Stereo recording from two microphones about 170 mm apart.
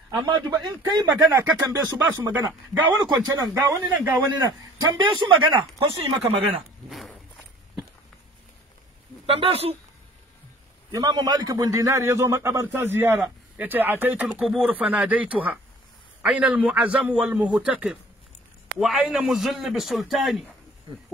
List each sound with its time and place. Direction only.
0.2 s a man's voice: 25° right (ahead or behind)
6.9 s walk: centre (ahead or behind)
9.2 s speech: 35° right (ahead or behind)
10.9 s a man's voice: 20° right (ahead or behind); by 20.4 s centre (ahead or behind)